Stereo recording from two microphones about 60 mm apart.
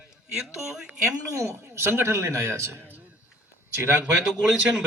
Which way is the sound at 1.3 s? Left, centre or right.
Right.